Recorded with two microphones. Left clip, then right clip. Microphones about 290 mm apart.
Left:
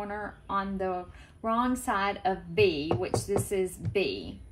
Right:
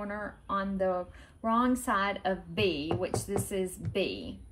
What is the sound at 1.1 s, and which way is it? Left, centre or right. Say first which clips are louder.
Speech: left 2 dB; centre.